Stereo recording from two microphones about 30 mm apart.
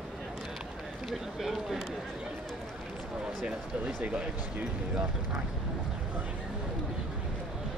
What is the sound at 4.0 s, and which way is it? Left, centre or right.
Speech, right.